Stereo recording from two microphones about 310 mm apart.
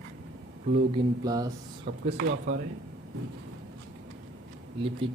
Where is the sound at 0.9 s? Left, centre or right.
Centre.